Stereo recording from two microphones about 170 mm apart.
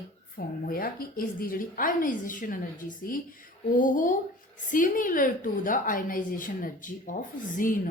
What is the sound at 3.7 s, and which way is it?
A woman's voice, 50° left (ahead or behind).